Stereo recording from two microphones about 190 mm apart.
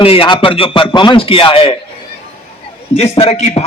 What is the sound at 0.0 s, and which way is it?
Speech, 30° left (ahead or behind).